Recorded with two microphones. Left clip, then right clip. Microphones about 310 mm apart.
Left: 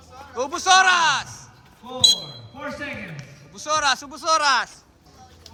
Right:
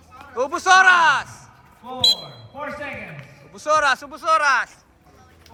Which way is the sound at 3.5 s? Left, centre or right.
Centre.